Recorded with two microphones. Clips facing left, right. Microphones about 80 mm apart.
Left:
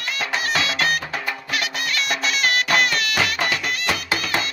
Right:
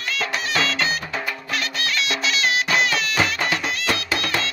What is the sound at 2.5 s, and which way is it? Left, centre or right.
Music, left.